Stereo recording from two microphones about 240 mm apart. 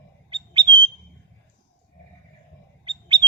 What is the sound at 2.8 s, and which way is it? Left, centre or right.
Bird, centre.